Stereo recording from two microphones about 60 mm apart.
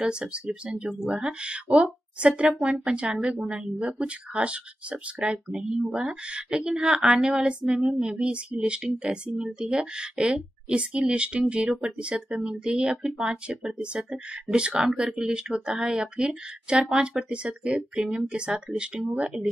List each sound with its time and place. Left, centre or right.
0.0 s a woman's voice: centre
5.3 s a woman's voice: centre